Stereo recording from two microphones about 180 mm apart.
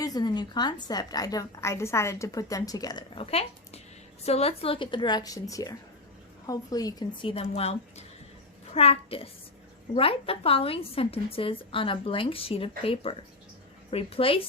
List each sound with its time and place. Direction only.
0.0 s a woman's voice: 20° left (ahead or behind)
3.2 s a woman's voice: 35° left (ahead or behind)